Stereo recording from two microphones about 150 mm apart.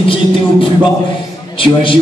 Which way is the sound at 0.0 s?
35° left (ahead or behind).